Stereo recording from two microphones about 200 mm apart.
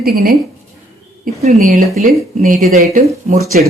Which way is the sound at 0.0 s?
50° right (ahead or behind).